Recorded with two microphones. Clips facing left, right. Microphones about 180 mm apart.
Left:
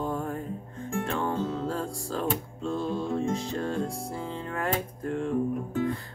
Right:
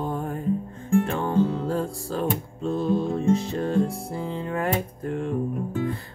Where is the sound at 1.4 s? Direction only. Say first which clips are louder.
Right 6 dB; 15° right (ahead or behind).